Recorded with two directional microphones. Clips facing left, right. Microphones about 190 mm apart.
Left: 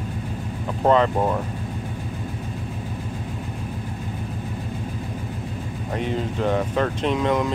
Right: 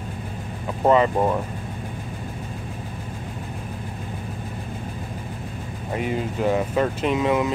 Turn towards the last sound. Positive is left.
turn(degrees=-5)  # may be behind; listen again after turning